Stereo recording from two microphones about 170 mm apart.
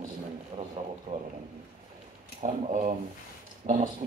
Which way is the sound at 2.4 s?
45° right (ahead or behind).